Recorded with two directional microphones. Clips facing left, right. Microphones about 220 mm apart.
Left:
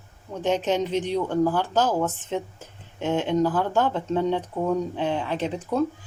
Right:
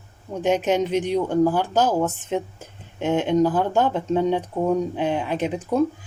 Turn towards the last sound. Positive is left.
turn(degrees=-15)  # may be behind; listen again after turning